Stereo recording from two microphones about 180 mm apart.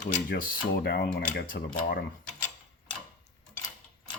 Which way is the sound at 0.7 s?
70° left (ahead or behind).